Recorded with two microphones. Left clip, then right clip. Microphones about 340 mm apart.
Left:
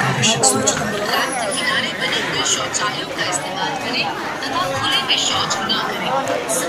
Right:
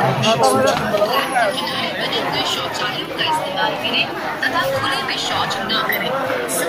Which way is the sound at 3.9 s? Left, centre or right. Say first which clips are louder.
Right 1 dB; centre.